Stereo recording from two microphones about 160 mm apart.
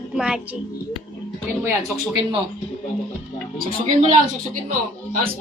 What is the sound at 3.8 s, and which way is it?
Speech, 45° right (ahead or behind).